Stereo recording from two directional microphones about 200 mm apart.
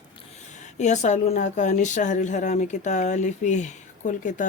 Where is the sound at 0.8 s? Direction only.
35° left (ahead or behind).